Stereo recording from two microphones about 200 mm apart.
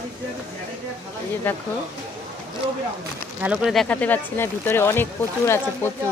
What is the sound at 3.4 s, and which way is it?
Speech, 5° right (ahead or behind).